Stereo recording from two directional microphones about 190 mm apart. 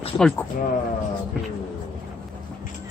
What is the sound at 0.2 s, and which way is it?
Speech, 5° left (ahead or behind).